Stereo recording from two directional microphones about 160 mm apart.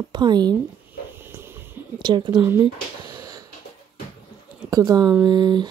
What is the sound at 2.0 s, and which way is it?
Speech, 30° right (ahead or behind).